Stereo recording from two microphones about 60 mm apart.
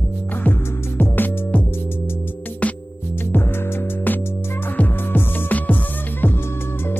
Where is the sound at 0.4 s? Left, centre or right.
Left.